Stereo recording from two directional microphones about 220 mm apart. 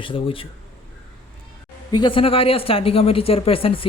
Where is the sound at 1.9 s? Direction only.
20° left (ahead or behind).